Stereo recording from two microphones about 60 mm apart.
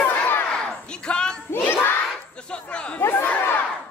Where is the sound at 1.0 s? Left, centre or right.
Centre.